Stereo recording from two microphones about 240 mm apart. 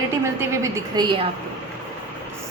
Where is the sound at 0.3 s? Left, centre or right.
Centre.